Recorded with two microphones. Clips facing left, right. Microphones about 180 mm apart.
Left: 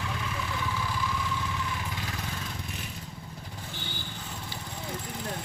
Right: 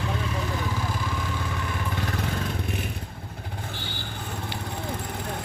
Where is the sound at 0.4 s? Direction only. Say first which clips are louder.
Right 4 dB; 40° right (ahead or behind).